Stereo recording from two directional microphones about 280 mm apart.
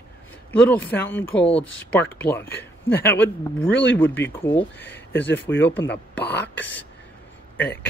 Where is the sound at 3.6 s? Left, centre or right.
Left.